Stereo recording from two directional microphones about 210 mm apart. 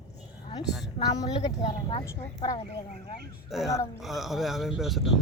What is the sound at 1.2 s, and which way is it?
Speech, 20° left (ahead or behind).